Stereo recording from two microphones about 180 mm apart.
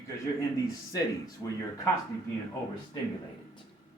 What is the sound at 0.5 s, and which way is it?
A man's voice, 20° left (ahead or behind).